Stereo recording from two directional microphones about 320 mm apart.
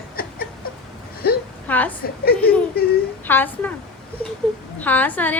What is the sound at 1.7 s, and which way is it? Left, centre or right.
Speech, centre.